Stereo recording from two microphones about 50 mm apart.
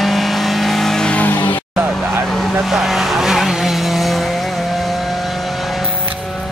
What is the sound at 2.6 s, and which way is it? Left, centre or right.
Vehicle, centre.